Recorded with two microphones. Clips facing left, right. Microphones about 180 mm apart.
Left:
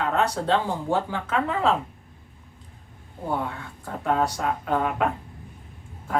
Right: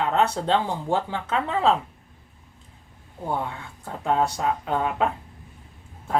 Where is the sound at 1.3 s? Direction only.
25° right (ahead or behind).